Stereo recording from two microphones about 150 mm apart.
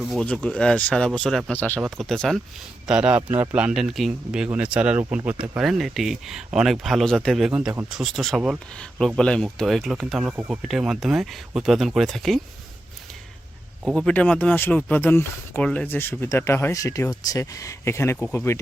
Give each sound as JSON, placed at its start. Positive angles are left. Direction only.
{"t": 0.0, "sound": "speech", "side_deg": 5}
{"t": 13.8, "sound": "speech", "side_deg": 5}